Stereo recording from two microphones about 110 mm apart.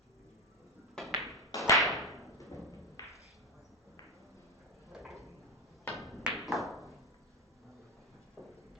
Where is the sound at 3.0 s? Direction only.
30° left (ahead or behind).